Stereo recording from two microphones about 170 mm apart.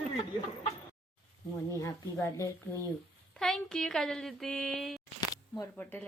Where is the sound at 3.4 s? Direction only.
5° left (ahead or behind).